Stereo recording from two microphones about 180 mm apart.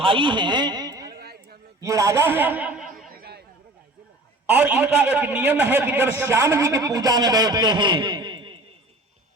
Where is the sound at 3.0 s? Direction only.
55° right (ahead or behind).